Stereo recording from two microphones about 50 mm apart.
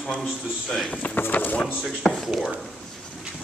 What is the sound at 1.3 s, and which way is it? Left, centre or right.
Speech, left.